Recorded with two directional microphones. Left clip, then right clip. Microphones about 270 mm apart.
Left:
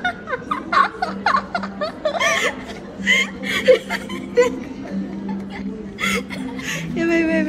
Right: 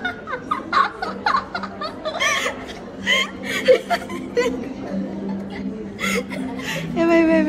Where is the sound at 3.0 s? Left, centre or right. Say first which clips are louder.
Left 2 dB; centre.